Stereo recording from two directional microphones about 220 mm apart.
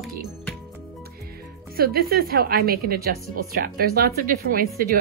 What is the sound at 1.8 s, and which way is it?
A woman's voice, 45° right (ahead or behind).